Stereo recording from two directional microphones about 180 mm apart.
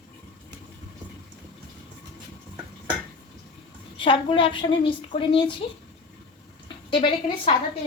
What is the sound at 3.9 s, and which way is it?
A woman's voice, 30° left (ahead or behind).